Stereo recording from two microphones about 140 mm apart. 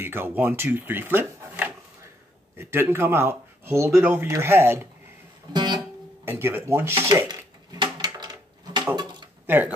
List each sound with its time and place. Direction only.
0.0 s speech: 15° right (ahead or behind)
1.4 s a sound: 15° right (ahead or behind)
2.5 s speech: 15° right (ahead or behind)
5.5 s music: 30° right (ahead or behind)
6.2 s speech: 15° right (ahead or behind)
7.2 s a sound: 30° right (ahead or behind)
9.5 s speech: 15° right (ahead or behind)